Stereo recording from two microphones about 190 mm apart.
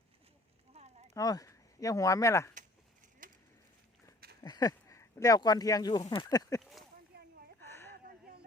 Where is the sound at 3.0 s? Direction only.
45° right (ahead or behind).